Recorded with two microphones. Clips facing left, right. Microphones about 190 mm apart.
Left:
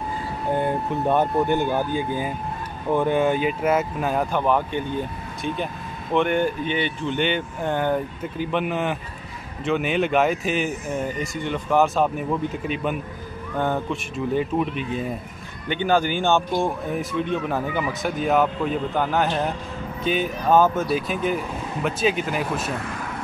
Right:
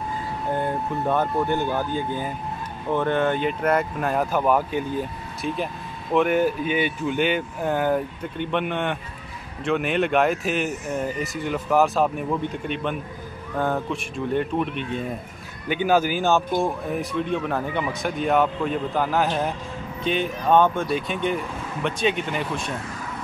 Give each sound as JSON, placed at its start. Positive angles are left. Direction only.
{"t": 1.0, "sound": "speech", "side_deg": 20}